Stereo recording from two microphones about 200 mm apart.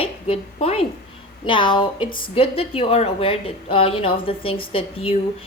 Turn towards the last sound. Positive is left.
turn(degrees=30)  # may be behind; listen again after turning